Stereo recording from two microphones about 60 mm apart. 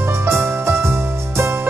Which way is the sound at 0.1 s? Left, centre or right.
Right.